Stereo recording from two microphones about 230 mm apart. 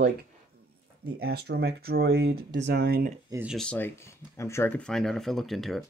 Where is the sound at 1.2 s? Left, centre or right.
Right.